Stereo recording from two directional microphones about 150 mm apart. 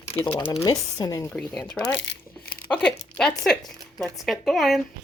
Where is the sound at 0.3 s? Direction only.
40° left (ahead or behind).